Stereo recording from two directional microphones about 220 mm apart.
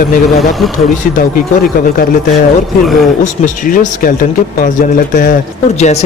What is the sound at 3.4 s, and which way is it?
Speech, 35° left (ahead or behind).